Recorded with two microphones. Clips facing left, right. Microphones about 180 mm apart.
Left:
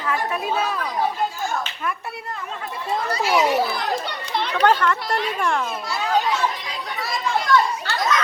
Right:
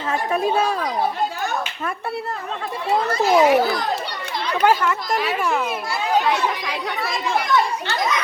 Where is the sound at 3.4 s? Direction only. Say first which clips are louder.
Right 5 dB; 60° right (ahead or behind).